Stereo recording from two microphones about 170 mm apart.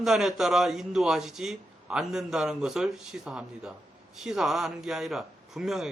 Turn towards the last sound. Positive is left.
turn(degrees=0)  # may be behind; listen again after turning